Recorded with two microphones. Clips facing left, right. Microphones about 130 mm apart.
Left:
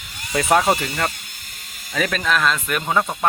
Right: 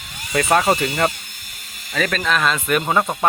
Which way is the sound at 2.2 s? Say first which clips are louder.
Left 1 dB; 5° right (ahead or behind).